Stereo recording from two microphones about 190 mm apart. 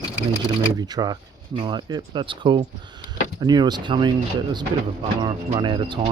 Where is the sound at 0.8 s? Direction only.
20° right (ahead or behind).